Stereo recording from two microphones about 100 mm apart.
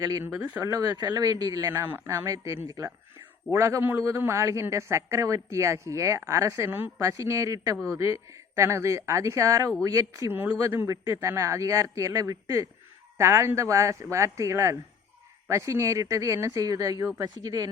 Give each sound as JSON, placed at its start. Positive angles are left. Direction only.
{"t": 0.0, "sound": "a man's voice", "side_deg": -35}
{"t": 0.3, "sound": "speech", "side_deg": -15}
{"t": 0.6, "sound": "a man's voice", "side_deg": -35}
{"t": 1.7, "sound": "a man's voice", "side_deg": -25}
{"t": 6.7, "sound": "speech", "side_deg": -20}
{"t": 7.0, "sound": "a man's voice", "side_deg": -35}